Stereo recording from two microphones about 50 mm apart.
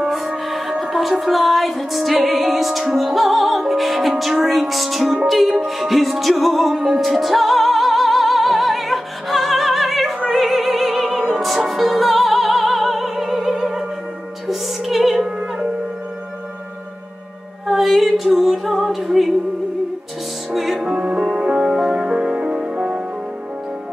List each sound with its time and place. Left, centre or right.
0.5 s music: centre
10.3 s opera: centre
11.3 s music: centre
17.6 s music: centre
20.5 s music: centre